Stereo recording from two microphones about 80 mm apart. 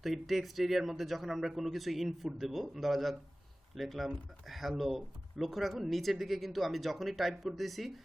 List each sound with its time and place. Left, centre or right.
0.0 s speech: centre